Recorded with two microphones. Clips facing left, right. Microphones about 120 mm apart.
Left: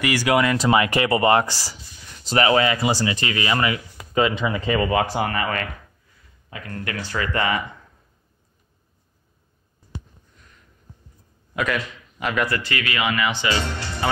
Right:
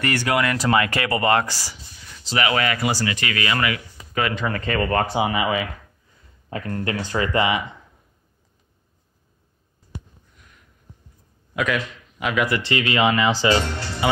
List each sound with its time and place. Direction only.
0.0 s speech: 10° left (ahead or behind); by 2.5 s 40° left (ahead or behind)
2.5 s speech: 25° left (ahead or behind)
5.1 s speech: 10° right (ahead or behind)
6.5 s speech: 35° right (ahead or behind); by 7.6 s 20° right (ahead or behind)
11.5 s a man's voice: centre (ahead or behind)
12.4 s speech: 20° right (ahead or behind)